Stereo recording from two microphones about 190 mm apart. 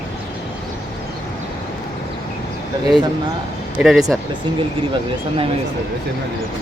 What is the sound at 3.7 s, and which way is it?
Speech, centre (ahead or behind).